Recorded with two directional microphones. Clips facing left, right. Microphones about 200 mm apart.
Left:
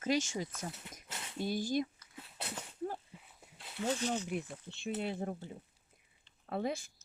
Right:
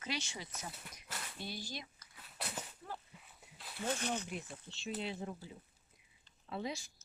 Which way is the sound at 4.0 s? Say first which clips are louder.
Left 4 dB; 60° right (ahead or behind).